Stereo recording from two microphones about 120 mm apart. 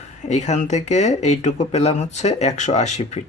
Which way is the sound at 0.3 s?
75° left (ahead or behind).